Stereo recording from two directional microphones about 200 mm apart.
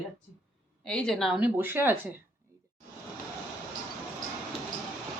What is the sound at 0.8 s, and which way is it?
A woman's voice, 5° left (ahead or behind).